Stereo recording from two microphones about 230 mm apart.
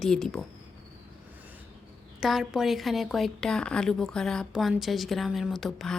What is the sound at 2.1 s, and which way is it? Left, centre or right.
A woman's voice, centre.